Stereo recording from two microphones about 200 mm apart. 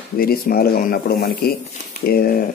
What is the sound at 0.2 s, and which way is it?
Speech, 50° left (ahead or behind).